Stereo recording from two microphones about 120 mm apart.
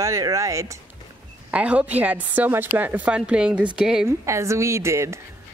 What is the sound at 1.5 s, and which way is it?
Speech, 10° right (ahead or behind).